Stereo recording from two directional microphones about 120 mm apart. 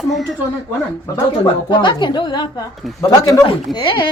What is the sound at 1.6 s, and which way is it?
Speech, 40° left (ahead or behind).